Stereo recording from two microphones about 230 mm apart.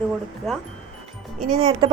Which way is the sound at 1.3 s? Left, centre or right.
Right.